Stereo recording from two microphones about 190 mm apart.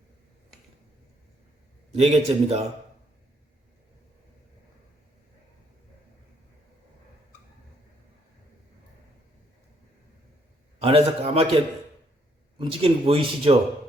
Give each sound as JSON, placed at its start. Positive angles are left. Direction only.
{"t": 2.0, "sound": "a man's voice", "side_deg": -35}
{"t": 10.8, "sound": "a man's voice", "side_deg": -30}